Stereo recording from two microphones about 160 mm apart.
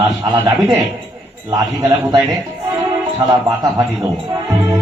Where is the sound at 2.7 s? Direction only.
25° right (ahead or behind).